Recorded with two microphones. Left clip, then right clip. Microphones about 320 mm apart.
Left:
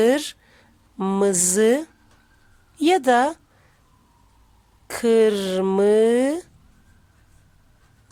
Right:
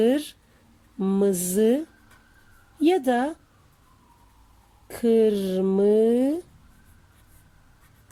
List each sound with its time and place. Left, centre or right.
0.0 s speech: centre
2.8 s speech: centre
4.9 s speech: centre